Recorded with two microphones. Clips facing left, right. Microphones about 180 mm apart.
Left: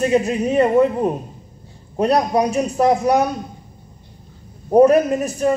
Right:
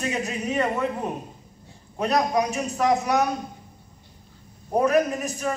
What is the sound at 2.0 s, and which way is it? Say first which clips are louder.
A man's voice: left 6 dB; 30° left (ahead or behind).